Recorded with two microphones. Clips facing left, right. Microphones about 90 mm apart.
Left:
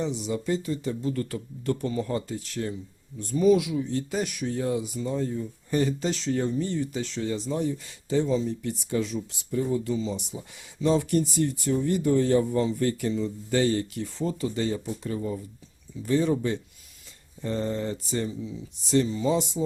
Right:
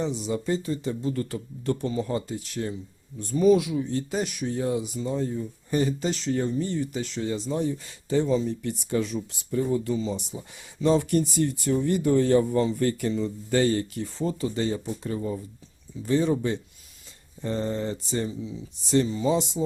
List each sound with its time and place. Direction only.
0.0 s speech: 35° right (ahead or behind)
3.2 s speech: 40° right (ahead or behind); by 7.2 s 5° right (ahead or behind)
7.2 s speech: 20° right (ahead or behind)
7.9 s speech: 50° right (ahead or behind); by 19.6 s 25° right (ahead or behind)